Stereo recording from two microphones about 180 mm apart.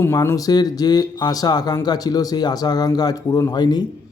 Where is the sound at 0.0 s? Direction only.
15° left (ahead or behind).